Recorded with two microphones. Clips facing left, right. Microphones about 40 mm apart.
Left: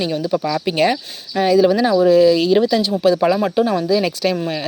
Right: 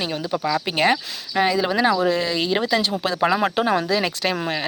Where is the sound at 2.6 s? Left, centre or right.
Right.